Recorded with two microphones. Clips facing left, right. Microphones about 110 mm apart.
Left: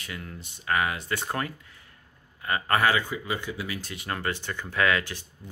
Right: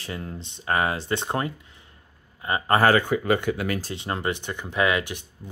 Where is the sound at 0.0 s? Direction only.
30° right (ahead or behind).